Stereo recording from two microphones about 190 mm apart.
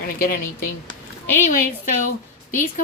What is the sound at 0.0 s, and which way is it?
Speech, 50° left (ahead or behind).